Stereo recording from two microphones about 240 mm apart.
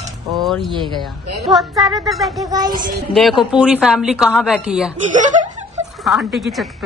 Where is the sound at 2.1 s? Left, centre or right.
Centre.